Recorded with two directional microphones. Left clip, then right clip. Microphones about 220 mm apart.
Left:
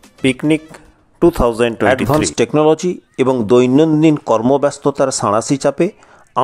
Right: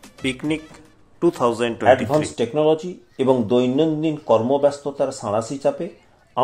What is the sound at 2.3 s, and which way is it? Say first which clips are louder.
Speech: left 7 dB; 45° left (ahead or behind).